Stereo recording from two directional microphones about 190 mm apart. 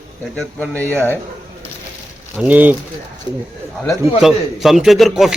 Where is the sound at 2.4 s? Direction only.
10° right (ahead or behind).